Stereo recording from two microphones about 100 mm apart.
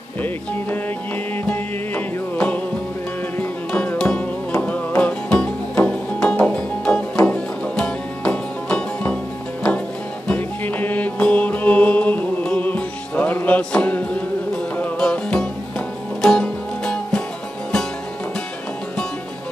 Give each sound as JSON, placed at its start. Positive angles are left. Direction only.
{"t": 1.5, "sound": "music", "side_deg": 15}